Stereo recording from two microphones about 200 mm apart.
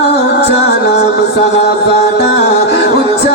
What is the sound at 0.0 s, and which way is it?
Music, 55° left (ahead or behind).